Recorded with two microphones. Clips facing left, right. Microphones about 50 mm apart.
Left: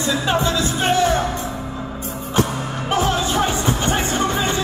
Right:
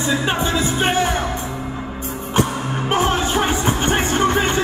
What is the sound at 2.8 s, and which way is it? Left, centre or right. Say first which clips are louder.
Music: right 1 dB; right.